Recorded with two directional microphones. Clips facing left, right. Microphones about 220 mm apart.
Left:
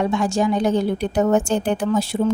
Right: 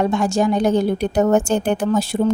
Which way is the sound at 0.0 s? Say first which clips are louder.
Right 2 dB; 45° right (ahead or behind).